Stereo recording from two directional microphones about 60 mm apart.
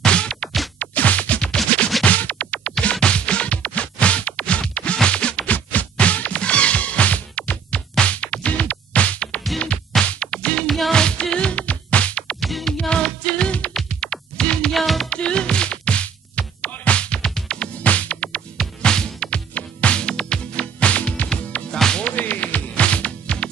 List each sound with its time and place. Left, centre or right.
0.0 s music: centre
0.7 s scratch: left
2.0 s music: left
12.4 s music: centre
12.9 s music: centre
14.7 s music: centre
15.0 s music: centre
22.0 s music: left